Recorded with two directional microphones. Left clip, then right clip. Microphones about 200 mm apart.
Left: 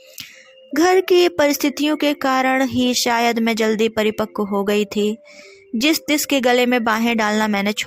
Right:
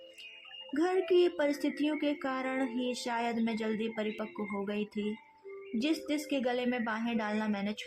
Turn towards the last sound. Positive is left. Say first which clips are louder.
# left 17 dB
turn(degrees=40)  # may be behind; listen again after turning